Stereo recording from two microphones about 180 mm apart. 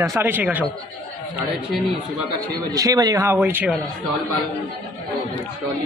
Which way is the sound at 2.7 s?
20° right (ahead or behind).